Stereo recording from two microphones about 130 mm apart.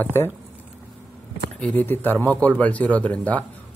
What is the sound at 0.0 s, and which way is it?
Speech, 20° left (ahead or behind).